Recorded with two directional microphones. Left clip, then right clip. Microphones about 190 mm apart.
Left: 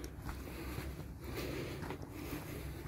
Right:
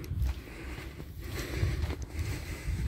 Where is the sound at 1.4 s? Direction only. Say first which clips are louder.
Right 4 dB; centre (ahead or behind).